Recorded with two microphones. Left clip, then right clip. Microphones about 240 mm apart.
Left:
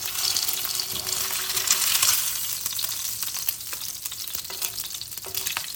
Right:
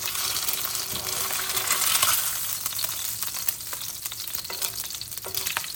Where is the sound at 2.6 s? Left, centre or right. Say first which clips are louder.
Left 1 dB; centre.